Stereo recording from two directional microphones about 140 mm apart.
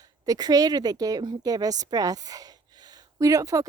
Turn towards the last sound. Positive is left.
turn(degrees=-25)  # may be behind; listen again after turning